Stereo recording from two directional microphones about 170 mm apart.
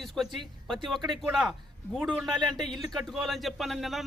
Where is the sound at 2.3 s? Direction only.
25° right (ahead or behind).